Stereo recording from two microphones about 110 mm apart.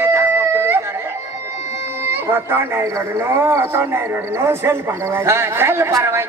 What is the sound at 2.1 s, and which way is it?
Speech, 20° right (ahead or behind).